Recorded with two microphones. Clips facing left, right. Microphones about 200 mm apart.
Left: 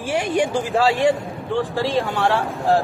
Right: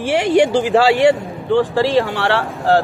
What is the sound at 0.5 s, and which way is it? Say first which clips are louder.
Speech: right 5 dB; 80° right.